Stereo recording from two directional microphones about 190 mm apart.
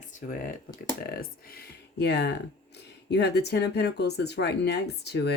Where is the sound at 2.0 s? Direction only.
60° left (ahead or behind).